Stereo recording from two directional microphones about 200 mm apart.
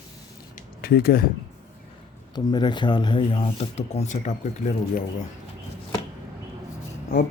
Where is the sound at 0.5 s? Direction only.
50° left (ahead or behind).